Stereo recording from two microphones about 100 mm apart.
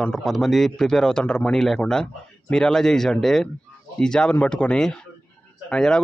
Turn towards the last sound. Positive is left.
turn(degrees=5)  # may be behind; listen again after turning